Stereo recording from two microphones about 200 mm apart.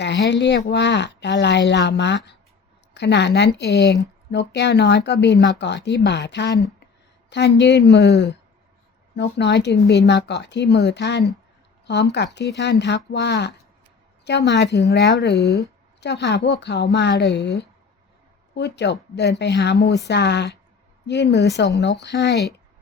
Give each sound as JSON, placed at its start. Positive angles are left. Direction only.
{"t": 0.0, "sound": "a woman's voice", "side_deg": 60}
{"t": 15.4, "sound": "speech", "side_deg": 15}
{"t": 16.0, "sound": "speech", "side_deg": 60}